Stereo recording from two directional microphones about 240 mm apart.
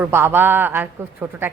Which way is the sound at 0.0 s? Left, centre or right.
Centre.